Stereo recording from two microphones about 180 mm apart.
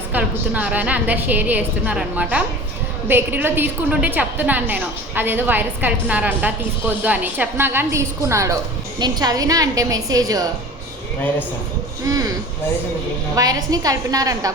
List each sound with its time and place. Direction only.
0.1 s a woman's voice: 10° right (ahead or behind)
12.0 s a woman's voice: 20° right (ahead or behind)
13.3 s a woman's voice: 20° right (ahead or behind)